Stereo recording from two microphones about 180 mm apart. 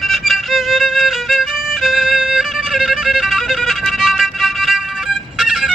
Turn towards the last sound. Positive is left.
turn(degrees=-5)  # may be behind; listen again after turning